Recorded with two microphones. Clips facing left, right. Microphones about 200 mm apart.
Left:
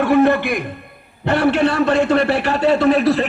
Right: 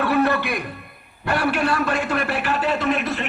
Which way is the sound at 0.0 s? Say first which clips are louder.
Left 6 dB; 15° left (ahead or behind).